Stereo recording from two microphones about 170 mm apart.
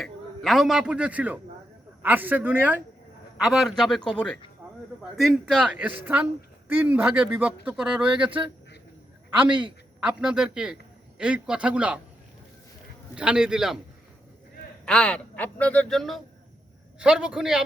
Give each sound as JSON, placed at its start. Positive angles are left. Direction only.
{"t": 0.0, "sound": "a man's voice", "side_deg": 0}
{"t": 3.3, "sound": "a man's voice", "side_deg": 0}
{"t": 4.6, "sound": "a sound", "side_deg": -5}
{"t": 5.1, "sound": "speech", "side_deg": 0}
{"t": 9.3, "sound": "a man's voice", "side_deg": -30}
{"t": 10.0, "sound": "a man's voice", "side_deg": -5}
{"t": 13.1, "sound": "a man's voice", "side_deg": -5}
{"t": 14.8, "sound": "a man's voice", "side_deg": 5}